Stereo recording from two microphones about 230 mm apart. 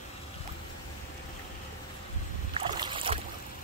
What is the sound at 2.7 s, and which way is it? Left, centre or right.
Boat, right.